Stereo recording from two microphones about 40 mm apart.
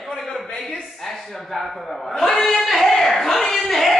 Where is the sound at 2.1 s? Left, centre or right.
Centre.